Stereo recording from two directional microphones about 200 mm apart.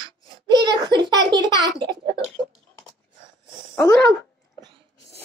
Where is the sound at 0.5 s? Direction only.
20° right (ahead or behind).